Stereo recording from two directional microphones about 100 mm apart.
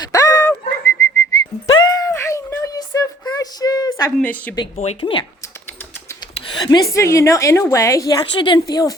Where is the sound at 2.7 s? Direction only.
40° left (ahead or behind).